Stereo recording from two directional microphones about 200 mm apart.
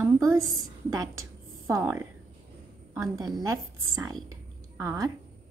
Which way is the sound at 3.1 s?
20° right (ahead or behind).